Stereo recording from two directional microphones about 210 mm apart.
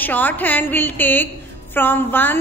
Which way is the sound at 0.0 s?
10° left (ahead or behind).